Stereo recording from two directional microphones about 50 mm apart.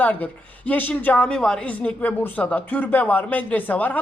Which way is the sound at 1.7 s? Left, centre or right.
Left.